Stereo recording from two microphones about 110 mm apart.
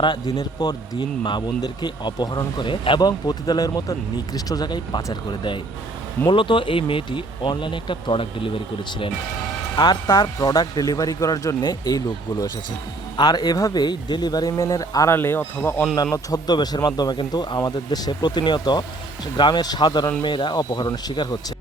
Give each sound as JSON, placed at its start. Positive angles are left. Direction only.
{"t": 0.0, "sound": "a man's voice", "side_deg": 40}
{"t": 6.2, "sound": "speech", "side_deg": 50}
{"t": 9.7, "sound": "speech", "side_deg": 45}
{"t": 10.3, "sound": "a man's voice", "side_deg": 30}
{"t": 15.1, "sound": "speech", "side_deg": 20}
{"t": 16.1, "sound": "a man's voice", "side_deg": 35}